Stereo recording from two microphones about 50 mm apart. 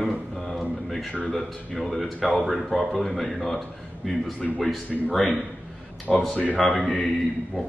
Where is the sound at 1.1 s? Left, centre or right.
Centre.